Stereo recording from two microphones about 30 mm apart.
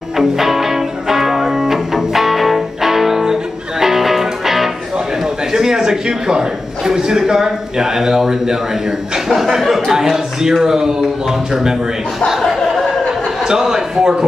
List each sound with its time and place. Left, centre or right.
0.2 s music: centre
5.5 s a sound: centre
6.9 s speech: centre
9.6 s speech: centre
12.4 s a sound: centre
13.5 s a man's voice: centre